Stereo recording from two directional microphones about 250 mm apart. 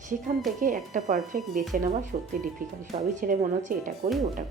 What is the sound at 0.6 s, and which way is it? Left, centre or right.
A woman's voice, right.